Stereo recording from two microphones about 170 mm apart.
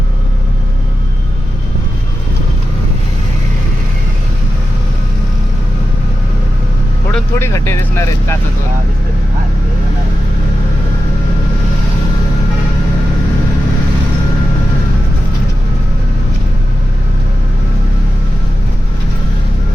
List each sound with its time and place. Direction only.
7.1 s speech: 15° left (ahead or behind)